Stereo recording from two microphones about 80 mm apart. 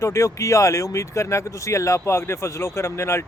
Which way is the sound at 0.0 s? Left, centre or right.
Left.